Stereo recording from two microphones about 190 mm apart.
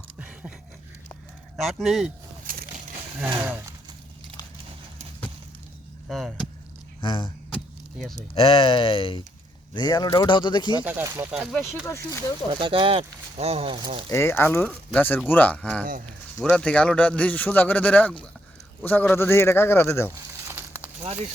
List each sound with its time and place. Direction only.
0.2 s a sound: 5° right (ahead or behind)
1.5 s speech: centre (ahead or behind)
2.5 s a sound: 50° right (ahead or behind)
6.1 s speech: centre (ahead or behind)
7.0 s speech: 25° left (ahead or behind)
7.5 s keys jangling: centre (ahead or behind)
8.4 s speech: 30° left (ahead or behind)
10.8 s speech: 10° right (ahead or behind)
11.9 s speech: 15° left (ahead or behind)
12.5 s speech: 25° right (ahead or behind)
14.1 s speech: 15° left (ahead or behind)
20.5 s a sound: 10° right (ahead or behind)